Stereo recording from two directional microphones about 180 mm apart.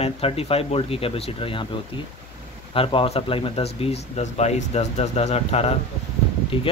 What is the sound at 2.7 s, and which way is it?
Speech, 30° left (ahead or behind).